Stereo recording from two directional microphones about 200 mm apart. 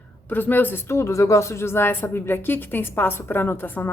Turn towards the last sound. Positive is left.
turn(degrees=10)  # may be behind; listen again after turning